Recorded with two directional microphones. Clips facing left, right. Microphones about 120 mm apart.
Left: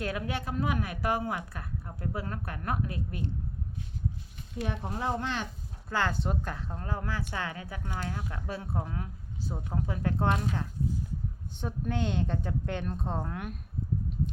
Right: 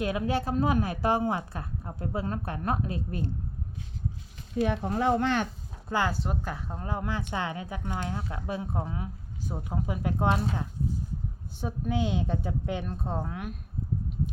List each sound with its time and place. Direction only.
0.0 s a woman's voice: 20° right (ahead or behind)
0.3 s a woman's voice: 35° right (ahead or behind)
4.6 s speech: 70° right (ahead or behind)
5.9 s speech: 15° right (ahead or behind)
6.7 s a woman's voice: 15° right (ahead or behind)
11.5 s a woman's voice: 5° right (ahead or behind)